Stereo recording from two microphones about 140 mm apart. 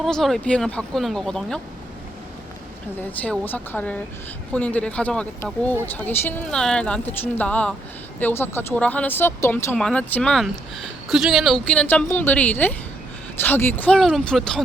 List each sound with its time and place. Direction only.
0.0 s speech: centre (ahead or behind)
3.0 s a woman's voice: 10° left (ahead or behind)